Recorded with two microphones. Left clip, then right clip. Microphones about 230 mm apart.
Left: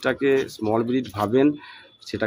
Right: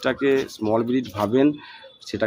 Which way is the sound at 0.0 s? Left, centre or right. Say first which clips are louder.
Even; centre.